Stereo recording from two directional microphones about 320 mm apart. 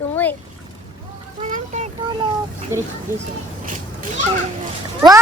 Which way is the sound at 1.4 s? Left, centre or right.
Right.